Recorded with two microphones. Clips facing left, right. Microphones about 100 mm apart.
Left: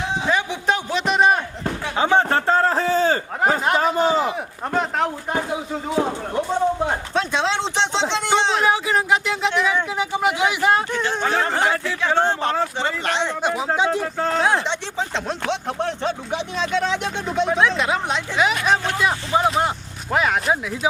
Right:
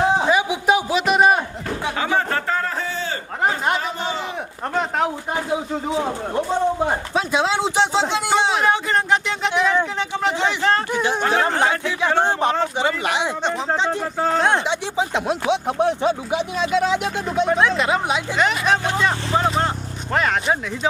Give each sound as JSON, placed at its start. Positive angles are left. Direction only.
{"t": 0.3, "sound": "a sound", "side_deg": -10}
{"t": 2.0, "sound": "a sound", "side_deg": 25}
{"t": 4.7, "sound": "speech", "side_deg": 0}
{"t": 6.3, "sound": "speech", "side_deg": -5}
{"t": 10.9, "sound": "speech", "side_deg": -15}
{"t": 13.4, "sound": "speech", "side_deg": 5}
{"t": 14.9, "sound": "speech", "side_deg": -10}